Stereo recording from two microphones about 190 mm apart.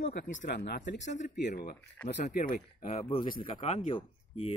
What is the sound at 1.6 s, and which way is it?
Speech, 55° left (ahead or behind).